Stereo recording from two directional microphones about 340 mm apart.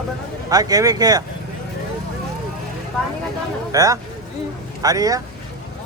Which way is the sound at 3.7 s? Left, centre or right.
Centre.